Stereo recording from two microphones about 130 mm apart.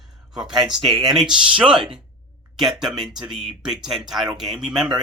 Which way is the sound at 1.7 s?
40° right (ahead or behind).